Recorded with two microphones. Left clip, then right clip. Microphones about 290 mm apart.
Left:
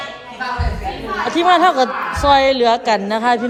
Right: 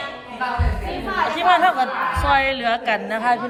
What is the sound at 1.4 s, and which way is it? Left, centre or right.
A woman's voice, centre.